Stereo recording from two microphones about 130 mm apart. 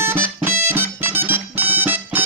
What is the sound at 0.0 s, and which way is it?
Music, 20° right (ahead or behind).